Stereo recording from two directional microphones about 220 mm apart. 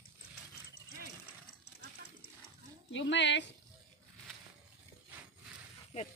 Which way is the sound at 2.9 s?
55° left (ahead or behind).